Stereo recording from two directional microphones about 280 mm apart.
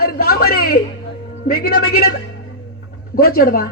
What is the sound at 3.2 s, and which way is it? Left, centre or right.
Speech, left.